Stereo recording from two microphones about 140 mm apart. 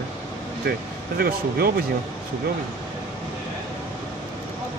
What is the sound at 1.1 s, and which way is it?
Speech, 90° right.